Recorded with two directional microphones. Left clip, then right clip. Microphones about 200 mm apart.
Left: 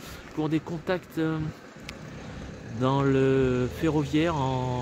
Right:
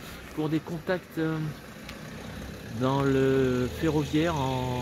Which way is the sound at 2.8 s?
30° left (ahead or behind).